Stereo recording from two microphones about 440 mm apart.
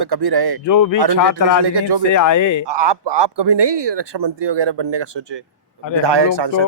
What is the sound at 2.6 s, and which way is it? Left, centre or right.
Speech, right.